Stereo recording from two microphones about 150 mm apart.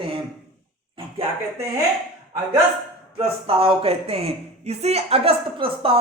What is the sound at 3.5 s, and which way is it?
Speech, 40° right (ahead or behind).